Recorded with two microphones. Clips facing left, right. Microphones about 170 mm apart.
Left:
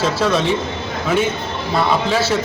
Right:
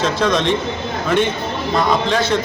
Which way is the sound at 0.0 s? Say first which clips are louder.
Even; 5° left (ahead or behind).